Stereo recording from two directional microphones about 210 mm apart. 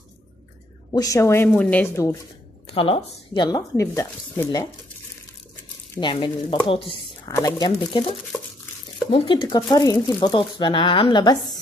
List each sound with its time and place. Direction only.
0.9 s speech: 15° left (ahead or behind)
2.7 s speech: 25° left (ahead or behind)
5.9 s speech: 20° left (ahead or behind)
9.1 s speech: 25° left (ahead or behind)